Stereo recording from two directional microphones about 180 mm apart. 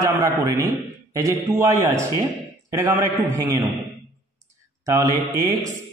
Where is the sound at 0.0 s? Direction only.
20° right (ahead or behind).